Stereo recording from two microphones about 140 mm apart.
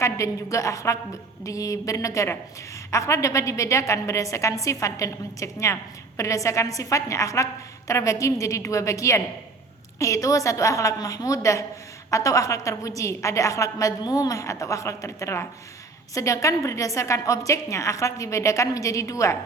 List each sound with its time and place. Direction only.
0.0 s a woman's voice: 20° left (ahead or behind)